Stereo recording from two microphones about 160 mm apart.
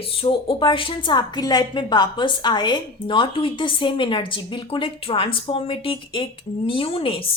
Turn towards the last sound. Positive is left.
turn(degrees=35)  # may be behind; listen again after turning